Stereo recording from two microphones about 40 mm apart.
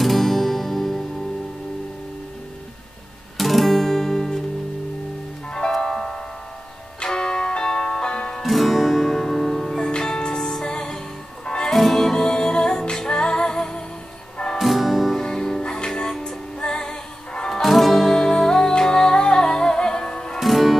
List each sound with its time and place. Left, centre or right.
0.0 s music: centre
3.3 s guitar: centre
5.7 s music: centre
8.4 s music: centre
9.8 s music: centre
11.7 s music: centre
14.6 s music: centre
15.2 s music: centre
17.6 s music: centre; by 20.3 s left
20.3 s music: centre